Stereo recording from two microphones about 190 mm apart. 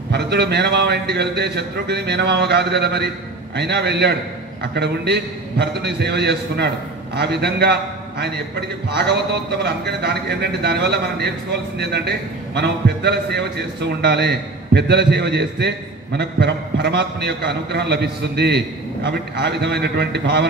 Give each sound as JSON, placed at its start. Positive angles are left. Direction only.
{"t": 0.1, "sound": "a man's voice", "side_deg": -60}